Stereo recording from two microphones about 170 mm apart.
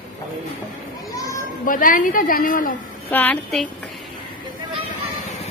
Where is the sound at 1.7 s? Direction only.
55° left (ahead or behind).